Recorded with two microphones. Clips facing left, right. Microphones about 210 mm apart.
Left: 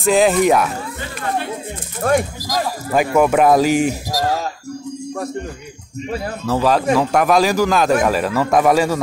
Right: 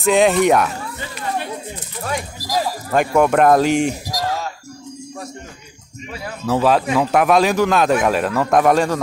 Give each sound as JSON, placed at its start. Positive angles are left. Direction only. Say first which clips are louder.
{"t": 0.0, "sound": "speech", "louder": "even", "side_deg": 0}
{"t": 2.0, "sound": "speech", "louder": "left 9 dB", "side_deg": 55}
{"t": 2.9, "sound": "speech", "louder": "left 1 dB", "side_deg": 5}
{"t": 6.0, "sound": "speech", "louder": "left 7 dB", "side_deg": 40}
{"t": 6.4, "sound": "speech", "louder": "right 1 dB", "side_deg": 0}